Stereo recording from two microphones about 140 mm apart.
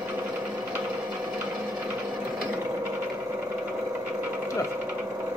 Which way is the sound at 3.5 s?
10° right (ahead or behind).